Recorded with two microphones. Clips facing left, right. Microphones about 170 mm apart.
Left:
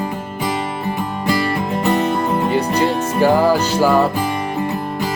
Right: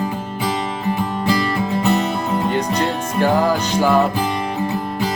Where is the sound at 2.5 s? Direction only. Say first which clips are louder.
Left 3 dB; 10° left (ahead or behind).